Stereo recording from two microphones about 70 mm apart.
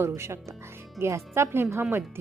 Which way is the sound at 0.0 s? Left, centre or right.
Right.